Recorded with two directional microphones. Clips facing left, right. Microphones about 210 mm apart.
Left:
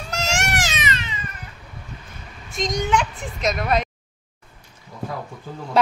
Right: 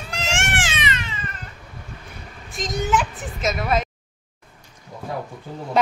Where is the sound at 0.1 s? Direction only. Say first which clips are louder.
Left 2 dB; 40° left (ahead or behind).